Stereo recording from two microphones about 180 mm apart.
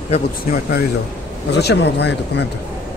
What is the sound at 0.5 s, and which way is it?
Speech, 50° left (ahead or behind).